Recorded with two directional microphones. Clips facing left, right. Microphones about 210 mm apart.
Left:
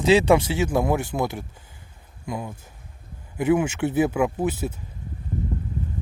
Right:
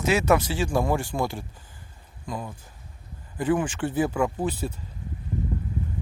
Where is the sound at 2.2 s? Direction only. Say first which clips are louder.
Left 3 dB; 10° left (ahead or behind).